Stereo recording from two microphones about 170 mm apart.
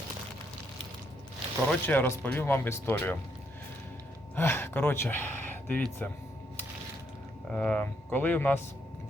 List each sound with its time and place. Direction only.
1.7 s speech: 10° left (ahead or behind)
4.4 s speech: 15° left (ahead or behind)
7.5 s speech: 5° left (ahead or behind)